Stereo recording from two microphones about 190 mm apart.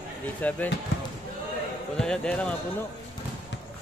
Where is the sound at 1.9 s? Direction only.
5° left (ahead or behind).